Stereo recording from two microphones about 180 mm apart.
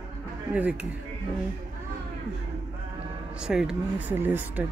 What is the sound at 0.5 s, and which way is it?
Speech, 10° right (ahead or behind).